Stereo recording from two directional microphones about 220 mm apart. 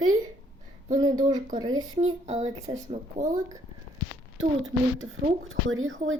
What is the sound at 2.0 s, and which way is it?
A child's voice, 30° right (ahead or behind).